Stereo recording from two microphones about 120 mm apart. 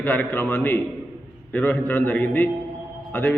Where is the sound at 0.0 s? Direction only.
15° left (ahead or behind).